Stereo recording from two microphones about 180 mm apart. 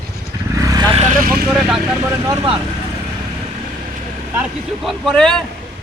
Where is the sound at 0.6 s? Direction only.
20° right (ahead or behind).